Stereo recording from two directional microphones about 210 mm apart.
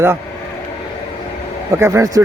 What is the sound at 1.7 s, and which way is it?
Speech, 15° right (ahead or behind).